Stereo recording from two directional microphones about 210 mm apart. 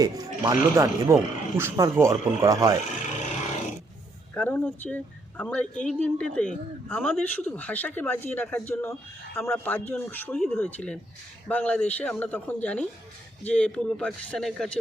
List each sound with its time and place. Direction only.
0.0 s speech: 20° right (ahead or behind)
4.4 s a man's voice: 10° left (ahead or behind)